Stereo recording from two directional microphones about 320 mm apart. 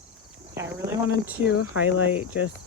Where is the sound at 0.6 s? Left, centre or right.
Centre.